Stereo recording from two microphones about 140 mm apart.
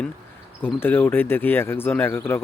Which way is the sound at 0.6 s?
15° left (ahead or behind).